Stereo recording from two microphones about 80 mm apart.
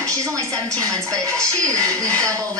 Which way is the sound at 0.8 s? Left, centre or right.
Right.